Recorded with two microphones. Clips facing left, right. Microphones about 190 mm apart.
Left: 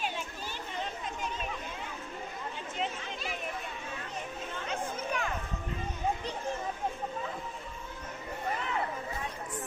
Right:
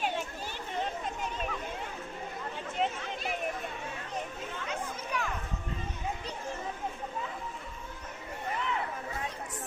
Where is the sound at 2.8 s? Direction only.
55° right (ahead or behind).